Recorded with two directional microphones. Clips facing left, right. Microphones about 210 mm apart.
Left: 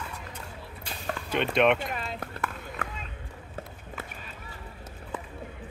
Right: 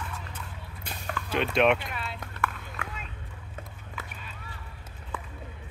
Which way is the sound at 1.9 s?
40° left (ahead or behind).